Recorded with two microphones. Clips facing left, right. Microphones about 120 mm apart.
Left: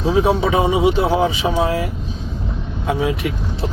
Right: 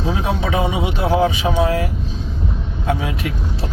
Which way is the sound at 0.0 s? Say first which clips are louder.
Left 5 dB; 25° left (ahead or behind).